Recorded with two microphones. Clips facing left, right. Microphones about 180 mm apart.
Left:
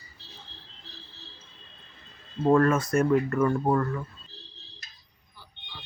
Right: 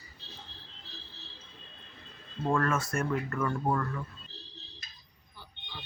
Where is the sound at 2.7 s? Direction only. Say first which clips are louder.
Left 8 dB; 20° left (ahead or behind).